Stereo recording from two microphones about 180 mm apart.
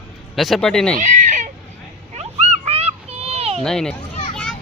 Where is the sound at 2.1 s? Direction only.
35° right (ahead or behind).